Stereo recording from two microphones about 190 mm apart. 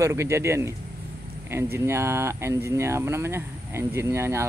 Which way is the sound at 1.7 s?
15° right (ahead or behind).